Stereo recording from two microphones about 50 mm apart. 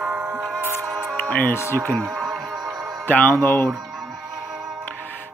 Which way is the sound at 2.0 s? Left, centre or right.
Centre.